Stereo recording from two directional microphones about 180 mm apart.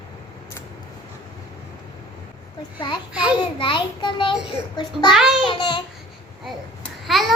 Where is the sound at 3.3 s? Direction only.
25° left (ahead or behind).